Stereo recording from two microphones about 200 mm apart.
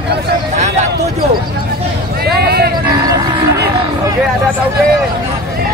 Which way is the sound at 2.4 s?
50° right (ahead or behind).